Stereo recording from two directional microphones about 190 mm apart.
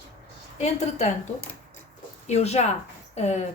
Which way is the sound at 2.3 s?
35° left (ahead or behind).